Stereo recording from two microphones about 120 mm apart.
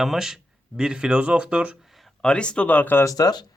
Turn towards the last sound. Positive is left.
turn(degrees=35)  # may be behind; listen again after turning